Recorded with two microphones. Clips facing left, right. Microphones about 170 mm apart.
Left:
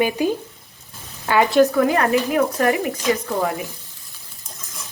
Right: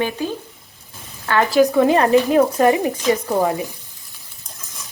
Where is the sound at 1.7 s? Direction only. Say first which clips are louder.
Right 4 dB; 25° right (ahead or behind).